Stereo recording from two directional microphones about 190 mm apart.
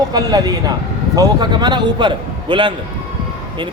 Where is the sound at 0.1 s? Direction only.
20° right (ahead or behind).